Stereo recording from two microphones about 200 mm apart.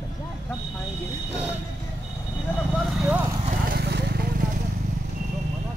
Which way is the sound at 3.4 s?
45° right (ahead or behind).